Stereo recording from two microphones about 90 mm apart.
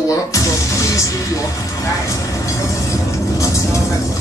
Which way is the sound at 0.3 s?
35° left (ahead or behind).